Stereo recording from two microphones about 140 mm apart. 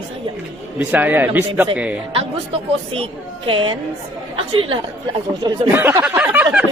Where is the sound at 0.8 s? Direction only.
15° right (ahead or behind).